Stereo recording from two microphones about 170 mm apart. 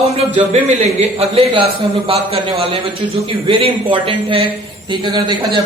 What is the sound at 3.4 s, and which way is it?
A man's voice, 30° right (ahead or behind).